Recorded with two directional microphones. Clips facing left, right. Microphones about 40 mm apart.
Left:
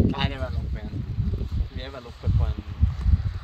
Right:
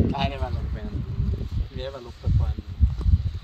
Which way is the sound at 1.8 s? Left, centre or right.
Centre.